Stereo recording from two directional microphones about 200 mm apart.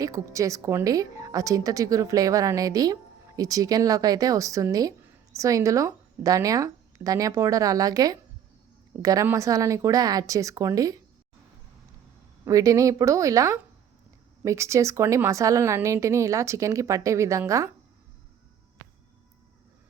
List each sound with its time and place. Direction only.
0.0 s a woman's voice: 15° right (ahead or behind)
12.5 s a woman's voice: 15° right (ahead or behind)